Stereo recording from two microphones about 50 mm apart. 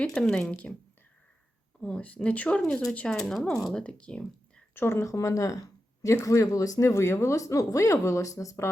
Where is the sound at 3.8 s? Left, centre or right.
Left.